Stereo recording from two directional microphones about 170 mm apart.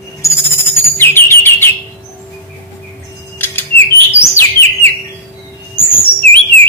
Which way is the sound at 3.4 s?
10° left (ahead or behind).